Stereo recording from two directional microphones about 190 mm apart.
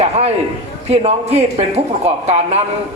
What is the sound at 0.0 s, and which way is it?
A man's voice, 35° right (ahead or behind).